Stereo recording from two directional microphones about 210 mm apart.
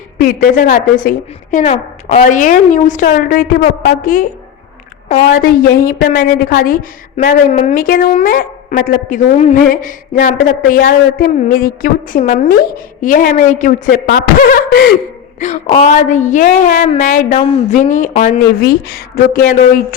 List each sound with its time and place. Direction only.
0.2 s a woman's voice: 40° left (ahead or behind)
5.4 s a woman's voice: 45° left (ahead or behind)
13.9 s a woman's voice: 45° left (ahead or behind)
18.6 s speech: 45° left (ahead or behind)